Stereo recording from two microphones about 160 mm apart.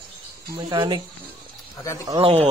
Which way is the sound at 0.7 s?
30° right (ahead or behind).